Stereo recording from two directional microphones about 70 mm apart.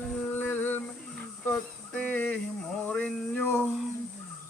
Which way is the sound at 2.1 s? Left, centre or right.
Left.